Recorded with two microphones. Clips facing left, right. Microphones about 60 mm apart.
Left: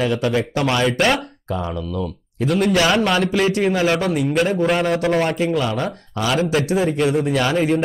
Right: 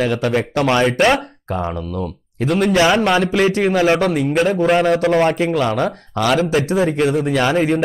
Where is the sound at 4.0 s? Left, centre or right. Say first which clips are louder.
Right 2 dB; right.